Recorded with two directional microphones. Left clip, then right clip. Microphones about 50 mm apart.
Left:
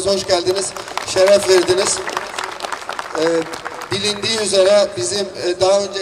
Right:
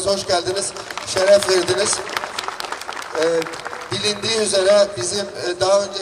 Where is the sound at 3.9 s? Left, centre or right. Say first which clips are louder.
Left 1 dB; left.